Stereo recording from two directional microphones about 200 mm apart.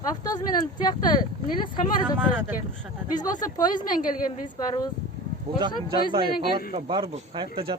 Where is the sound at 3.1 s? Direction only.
20° left (ahead or behind).